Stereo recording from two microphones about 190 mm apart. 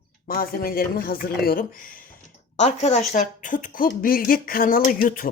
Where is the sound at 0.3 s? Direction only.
50° left (ahead or behind).